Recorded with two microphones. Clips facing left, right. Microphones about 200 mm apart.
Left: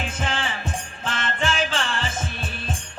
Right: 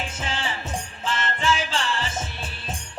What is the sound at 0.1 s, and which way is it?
Music, 55° left (ahead or behind).